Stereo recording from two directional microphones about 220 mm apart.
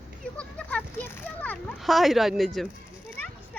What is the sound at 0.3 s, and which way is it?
A child's voice, 5° left (ahead or behind).